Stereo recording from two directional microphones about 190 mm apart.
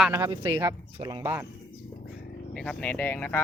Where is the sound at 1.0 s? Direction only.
20° right (ahead or behind).